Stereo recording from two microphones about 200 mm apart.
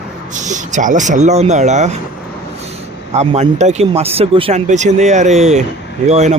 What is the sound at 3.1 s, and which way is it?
Speech, 35° right (ahead or behind).